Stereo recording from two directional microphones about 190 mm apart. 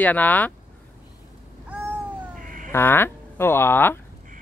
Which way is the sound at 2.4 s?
45° right (ahead or behind).